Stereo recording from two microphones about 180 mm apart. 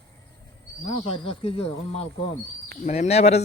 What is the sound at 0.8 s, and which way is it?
Speech, 30° left (ahead or behind).